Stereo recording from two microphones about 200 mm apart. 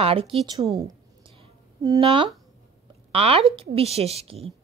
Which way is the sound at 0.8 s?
20° right (ahead or behind).